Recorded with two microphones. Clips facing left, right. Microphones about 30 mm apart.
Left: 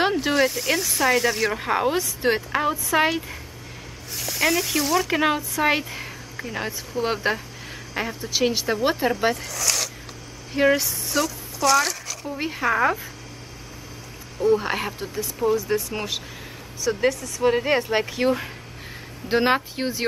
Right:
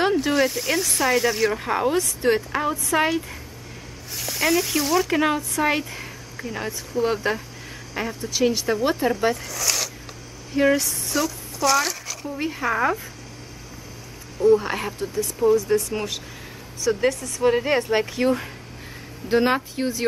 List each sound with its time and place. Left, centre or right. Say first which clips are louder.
0.0 s speech: even; centre
1.6 s speech: even; centre
4.2 s speech: right 1 dB; centre
10.5 s a woman's voice: even; centre
12.4 s speech: left 1 dB; centre
14.4 s speech: right 2 dB; centre
19.2 s speech: even; left